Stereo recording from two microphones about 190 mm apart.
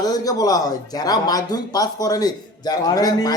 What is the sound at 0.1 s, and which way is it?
Speech, 20° left (ahead or behind).